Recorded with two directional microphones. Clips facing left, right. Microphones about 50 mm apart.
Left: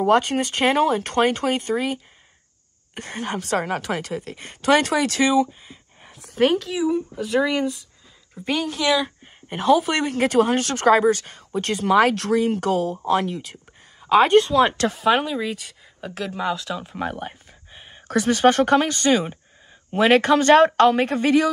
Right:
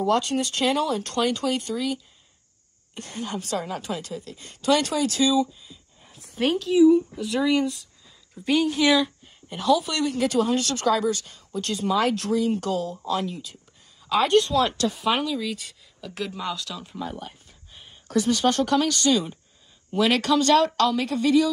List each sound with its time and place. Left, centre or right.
0.0 s speech: left
2.9 s a woman's voice: left
6.0 s a sound: left
6.6 s speech: left
7.4 s speech: centre
8.6 s speech: centre
9.5 s a woman's voice: left
14.0 s speech: left
14.8 s speech: left
15.2 s speech: left
16.3 s speech: centre
16.9 s speech: left